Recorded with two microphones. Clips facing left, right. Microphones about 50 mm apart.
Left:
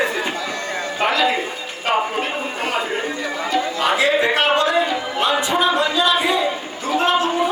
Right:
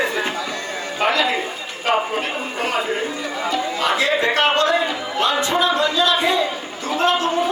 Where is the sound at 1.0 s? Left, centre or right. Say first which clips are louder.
Even; centre.